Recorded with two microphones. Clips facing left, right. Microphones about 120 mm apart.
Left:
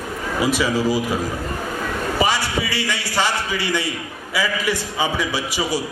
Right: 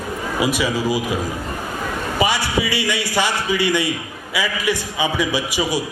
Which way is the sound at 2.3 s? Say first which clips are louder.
Right 1 dB; 15° right (ahead or behind).